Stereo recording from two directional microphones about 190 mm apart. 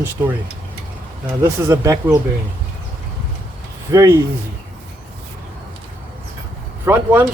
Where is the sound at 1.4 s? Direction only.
15° right (ahead or behind).